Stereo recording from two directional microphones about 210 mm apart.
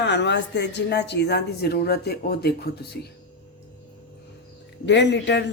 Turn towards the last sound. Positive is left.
turn(degrees=55)  # may be behind; listen again after turning